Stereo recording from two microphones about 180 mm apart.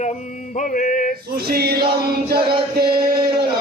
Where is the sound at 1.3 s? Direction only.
60° right (ahead or behind).